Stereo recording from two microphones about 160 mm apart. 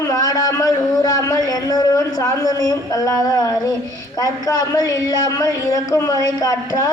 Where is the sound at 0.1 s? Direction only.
20° left (ahead or behind).